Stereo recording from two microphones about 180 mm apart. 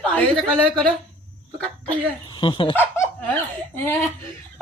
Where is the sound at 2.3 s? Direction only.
30° left (ahead or behind).